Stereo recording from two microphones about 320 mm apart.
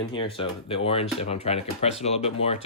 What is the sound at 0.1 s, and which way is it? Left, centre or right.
Speech, centre.